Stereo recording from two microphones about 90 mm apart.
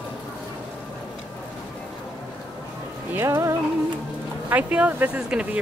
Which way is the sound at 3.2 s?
30° right (ahead or behind).